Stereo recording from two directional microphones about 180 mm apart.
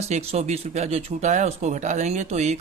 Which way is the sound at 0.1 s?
35° right (ahead or behind).